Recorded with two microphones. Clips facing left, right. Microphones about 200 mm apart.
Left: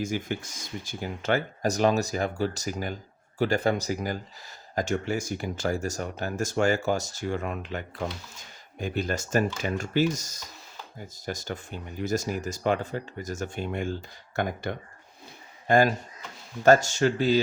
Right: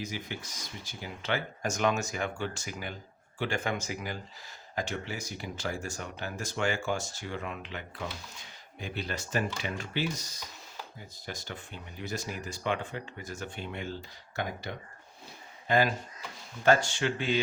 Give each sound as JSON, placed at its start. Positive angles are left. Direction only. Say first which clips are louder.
{"t": 0.0, "sound": "speech", "louder": "left 8 dB", "side_deg": 50}